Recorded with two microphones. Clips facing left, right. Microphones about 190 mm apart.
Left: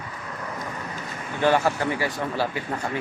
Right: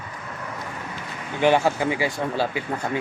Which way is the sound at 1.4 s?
20° right (ahead or behind).